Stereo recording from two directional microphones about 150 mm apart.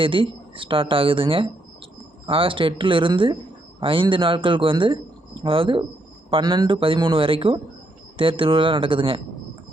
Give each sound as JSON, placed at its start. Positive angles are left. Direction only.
{"t": 0.0, "sound": "speech", "side_deg": -35}